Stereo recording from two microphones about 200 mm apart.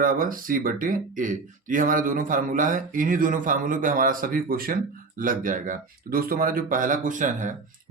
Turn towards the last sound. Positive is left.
turn(degrees=-40)  # may be behind; listen again after turning